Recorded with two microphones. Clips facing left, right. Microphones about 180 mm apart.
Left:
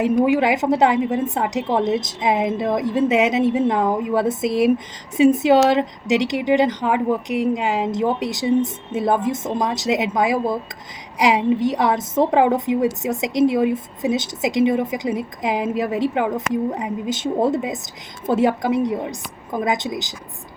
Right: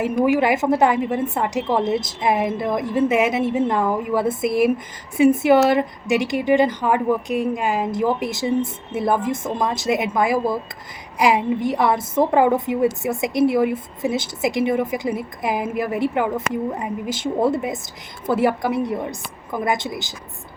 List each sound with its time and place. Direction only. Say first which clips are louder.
0.0 s a woman's voice: left 1 dB; 20° left (ahead or behind)